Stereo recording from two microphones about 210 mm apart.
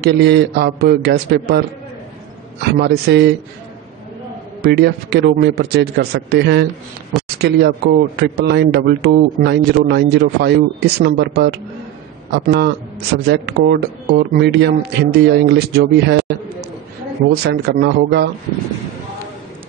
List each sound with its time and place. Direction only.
0.0 s a man's voice: 55° right (ahead or behind)
2.8 s a man's voice: 50° right (ahead or behind)
4.6 s a man's voice: 50° right (ahead or behind)
7.1 s a sound: centre (ahead or behind)
7.4 s a man's voice: 50° right (ahead or behind)
17.4 s a man's voice: 50° right (ahead or behind)